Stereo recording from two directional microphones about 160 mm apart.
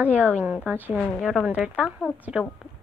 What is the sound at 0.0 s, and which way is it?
Speech, 10° right (ahead or behind).